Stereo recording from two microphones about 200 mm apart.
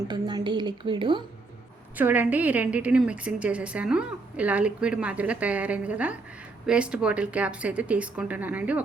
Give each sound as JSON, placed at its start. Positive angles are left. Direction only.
{"t": 0.1, "sound": "a woman's voice", "side_deg": -20}
{"t": 2.0, "sound": "a woman's voice", "side_deg": -10}